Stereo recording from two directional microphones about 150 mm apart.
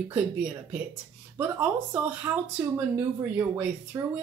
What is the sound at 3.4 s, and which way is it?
Speech, 15° right (ahead or behind).